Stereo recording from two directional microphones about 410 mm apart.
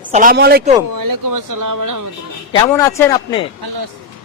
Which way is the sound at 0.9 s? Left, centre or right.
Right.